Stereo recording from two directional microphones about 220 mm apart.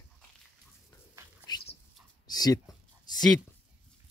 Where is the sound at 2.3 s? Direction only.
15° left (ahead or behind).